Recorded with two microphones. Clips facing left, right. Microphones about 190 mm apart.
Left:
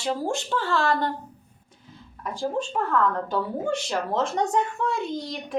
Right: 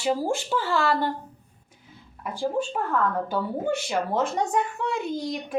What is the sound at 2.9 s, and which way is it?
A woman's voice, 10° right (ahead or behind).